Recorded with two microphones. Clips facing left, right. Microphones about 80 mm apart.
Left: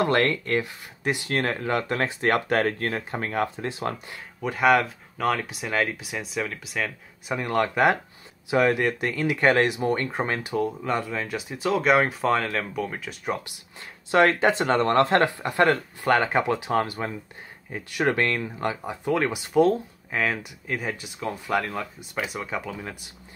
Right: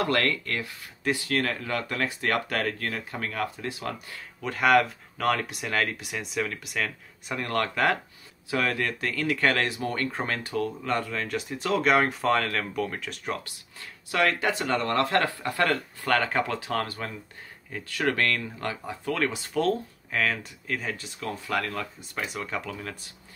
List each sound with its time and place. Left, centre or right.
0.0 s speech: left
4.4 s speech: centre
14.1 s speech: left; by 22.9 s centre